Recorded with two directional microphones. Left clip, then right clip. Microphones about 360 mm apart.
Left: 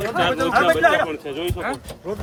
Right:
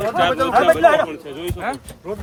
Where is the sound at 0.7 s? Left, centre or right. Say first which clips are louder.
Right 4 dB; right.